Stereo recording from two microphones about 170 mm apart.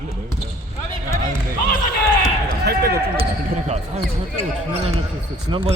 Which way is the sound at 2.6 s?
65° right (ahead or behind).